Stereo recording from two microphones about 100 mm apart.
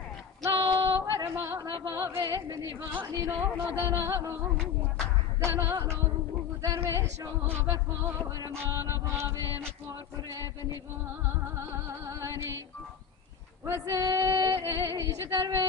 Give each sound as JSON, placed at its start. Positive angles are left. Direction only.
{"t": 0.4, "sound": "female singing", "side_deg": -35}
{"t": 2.9, "sound": "speech", "side_deg": -20}
{"t": 5.4, "sound": "speech", "side_deg": -25}
{"t": 12.1, "sound": "female singing", "side_deg": -30}
{"t": 13.7, "sound": "female singing", "side_deg": -35}
{"t": 14.7, "sound": "speech", "side_deg": -30}